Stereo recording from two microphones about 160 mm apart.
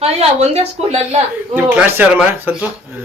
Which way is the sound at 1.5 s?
10° right (ahead or behind).